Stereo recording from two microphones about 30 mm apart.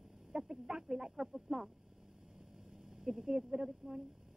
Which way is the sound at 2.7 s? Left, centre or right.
Centre.